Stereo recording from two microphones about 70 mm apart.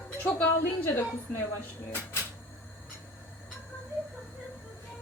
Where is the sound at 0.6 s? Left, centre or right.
Left.